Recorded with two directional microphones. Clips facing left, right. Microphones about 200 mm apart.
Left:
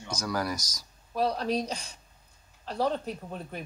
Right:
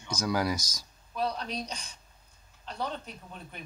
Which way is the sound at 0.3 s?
15° right (ahead or behind).